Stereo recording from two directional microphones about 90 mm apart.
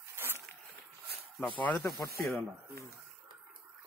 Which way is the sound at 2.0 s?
35° left (ahead or behind).